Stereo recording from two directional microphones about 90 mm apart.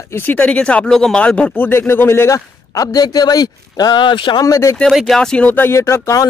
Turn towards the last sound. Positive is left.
turn(degrees=30)  # may be behind; listen again after turning